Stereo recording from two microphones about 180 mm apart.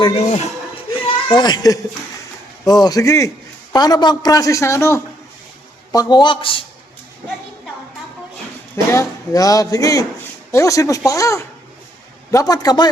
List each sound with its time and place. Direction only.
0.0 s speech: 35° left (ahead or behind)
0.9 s a sound: 30° left (ahead or behind)
2.6 s a man's voice: 20° left (ahead or behind)
8.7 s a man's voice: 15° left (ahead or behind)